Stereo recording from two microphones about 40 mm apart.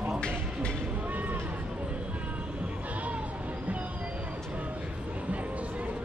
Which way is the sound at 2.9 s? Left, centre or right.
Right.